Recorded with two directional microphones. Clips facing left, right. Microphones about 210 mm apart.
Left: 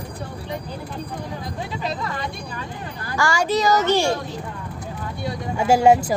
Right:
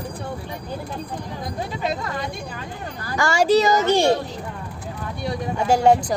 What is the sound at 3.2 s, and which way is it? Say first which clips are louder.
Speech: right 4 dB; 25° right (ahead or behind).